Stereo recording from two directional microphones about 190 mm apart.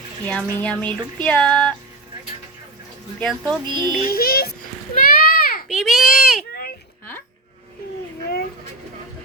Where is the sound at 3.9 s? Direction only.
50° left (ahead or behind).